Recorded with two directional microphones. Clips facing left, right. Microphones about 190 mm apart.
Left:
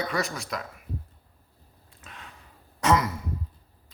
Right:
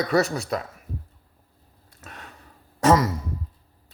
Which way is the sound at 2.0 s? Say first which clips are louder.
Right 4 dB; 40° right (ahead or behind).